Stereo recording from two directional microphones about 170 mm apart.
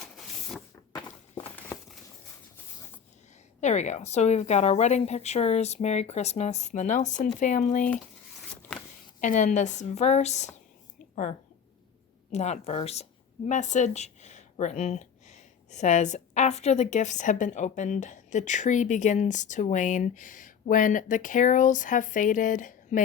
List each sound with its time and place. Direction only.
0.2 s a sound: centre (ahead or behind)
3.6 s a woman's voice: 45° left (ahead or behind)
9.2 s a woman's voice: 45° left (ahead or behind)